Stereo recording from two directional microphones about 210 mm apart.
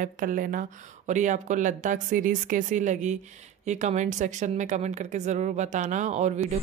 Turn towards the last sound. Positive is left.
turn(degrees=-35)  # may be behind; listen again after turning